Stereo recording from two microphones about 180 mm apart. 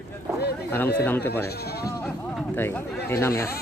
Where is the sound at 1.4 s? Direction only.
60° left (ahead or behind).